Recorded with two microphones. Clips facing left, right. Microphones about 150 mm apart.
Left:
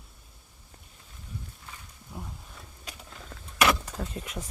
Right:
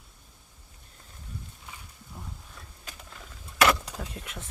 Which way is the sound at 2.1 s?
5° left (ahead or behind).